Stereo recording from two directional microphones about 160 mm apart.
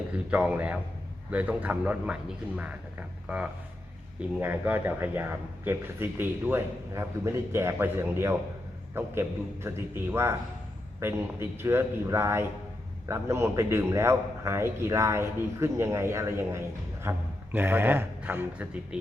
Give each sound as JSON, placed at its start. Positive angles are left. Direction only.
{"t": 0.3, "sound": "a man's voice", "side_deg": -10}
{"t": 3.2, "sound": "a man's voice", "side_deg": -5}